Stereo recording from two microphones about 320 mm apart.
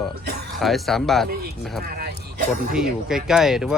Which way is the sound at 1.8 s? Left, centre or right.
Right.